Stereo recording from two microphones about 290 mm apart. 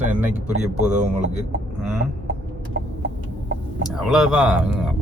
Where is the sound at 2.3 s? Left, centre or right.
Right.